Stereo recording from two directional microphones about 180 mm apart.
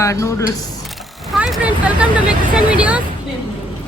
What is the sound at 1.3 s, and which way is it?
Speech, 5° right (ahead or behind).